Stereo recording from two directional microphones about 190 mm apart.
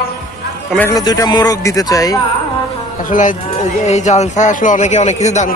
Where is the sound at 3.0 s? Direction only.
45° left (ahead or behind).